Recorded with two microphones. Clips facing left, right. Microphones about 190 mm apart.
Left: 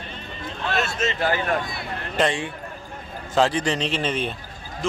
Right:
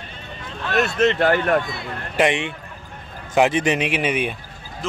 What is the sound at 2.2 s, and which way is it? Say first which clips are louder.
Speech: right 3 dB; 20° right (ahead or behind).